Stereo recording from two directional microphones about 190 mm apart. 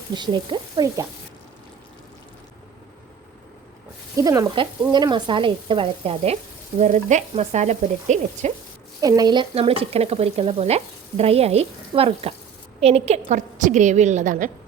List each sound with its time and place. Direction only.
0.1 s speech: 25° right (ahead or behind)
4.2 s speech: 20° right (ahead or behind)
6.7 s frying: 40° right (ahead or behind)
9.0 s frying: 20° right (ahead or behind); by 14.5 s 40° right (ahead or behind)